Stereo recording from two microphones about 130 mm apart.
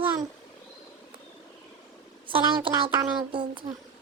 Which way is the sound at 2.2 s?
40° right (ahead or behind).